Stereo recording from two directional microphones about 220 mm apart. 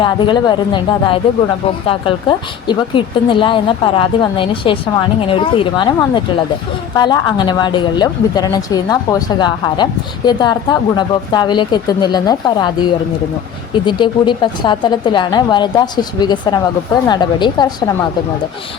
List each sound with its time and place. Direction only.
0.0 s speech: 20° left (ahead or behind)